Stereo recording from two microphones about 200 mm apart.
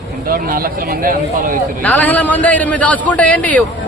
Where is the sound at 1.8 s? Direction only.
10° left (ahead or behind).